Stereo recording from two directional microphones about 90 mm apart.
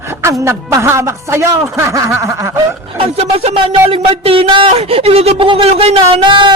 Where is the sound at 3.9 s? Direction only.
90° right.